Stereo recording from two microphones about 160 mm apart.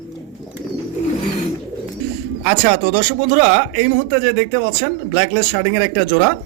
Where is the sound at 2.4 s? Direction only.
90° right.